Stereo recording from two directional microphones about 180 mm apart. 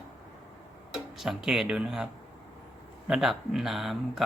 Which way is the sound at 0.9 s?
Centre (ahead or behind).